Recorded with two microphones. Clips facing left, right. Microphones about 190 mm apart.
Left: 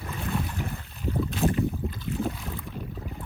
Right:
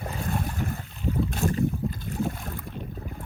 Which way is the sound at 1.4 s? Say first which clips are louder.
Left 3 dB; 35° left (ahead or behind).